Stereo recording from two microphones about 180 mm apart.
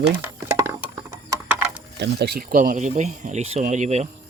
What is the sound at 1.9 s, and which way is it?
Speech, 70° right (ahead or behind).